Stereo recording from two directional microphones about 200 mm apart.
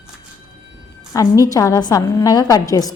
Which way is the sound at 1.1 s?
15° left (ahead or behind).